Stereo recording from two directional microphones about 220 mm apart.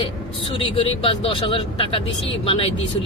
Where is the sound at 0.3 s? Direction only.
25° left (ahead or behind).